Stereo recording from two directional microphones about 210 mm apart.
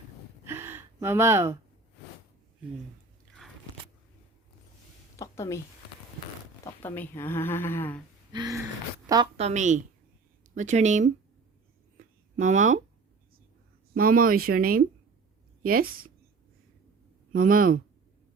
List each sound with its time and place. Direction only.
0.4 s gasp: 10° right (ahead or behind)
5.1 s a sound: 15° left (ahead or behind)
6.7 s speech: 10° left (ahead or behind)
8.3 s a sound: 20° right (ahead or behind)
9.1 s a woman's voice: 15° right (ahead or behind)
9.4 s speech: 35° right (ahead or behind)
11.9 s a sound: 35° right (ahead or behind)
13.9 s speech: 45° right (ahead or behind)
17.3 s speech: 40° right (ahead or behind)